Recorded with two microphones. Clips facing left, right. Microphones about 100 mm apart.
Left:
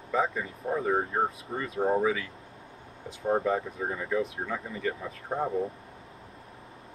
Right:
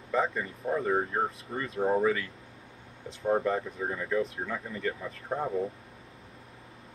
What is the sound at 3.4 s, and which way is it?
Speech, 5° left (ahead or behind).